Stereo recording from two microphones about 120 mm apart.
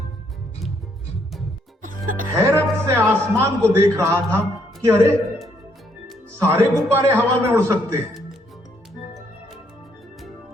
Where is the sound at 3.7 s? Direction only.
20° right (ahead or behind).